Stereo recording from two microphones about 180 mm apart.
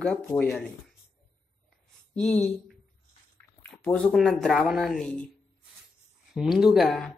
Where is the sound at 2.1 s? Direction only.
Centre (ahead or behind).